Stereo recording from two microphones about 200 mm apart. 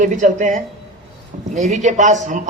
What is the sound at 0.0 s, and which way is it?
A man's voice, 40° right (ahead or behind).